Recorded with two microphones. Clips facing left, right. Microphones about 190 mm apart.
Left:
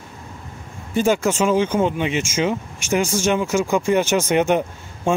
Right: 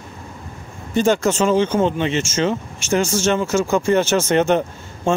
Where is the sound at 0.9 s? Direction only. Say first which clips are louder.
Right 1 dB; 10° left (ahead or behind).